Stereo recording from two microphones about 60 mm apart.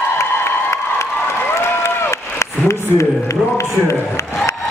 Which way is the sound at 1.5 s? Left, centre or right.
Left.